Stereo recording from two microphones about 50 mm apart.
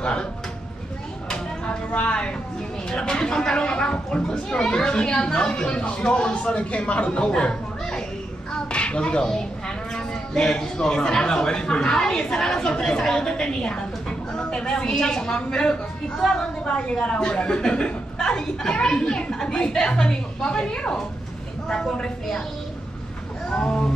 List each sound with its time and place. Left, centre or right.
0.0 s speech: centre
1.9 s speech: left
23.5 s speech: centre